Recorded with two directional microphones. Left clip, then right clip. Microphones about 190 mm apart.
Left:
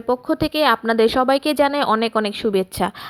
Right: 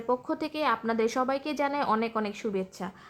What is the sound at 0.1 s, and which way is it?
A woman's voice, 30° left (ahead or behind).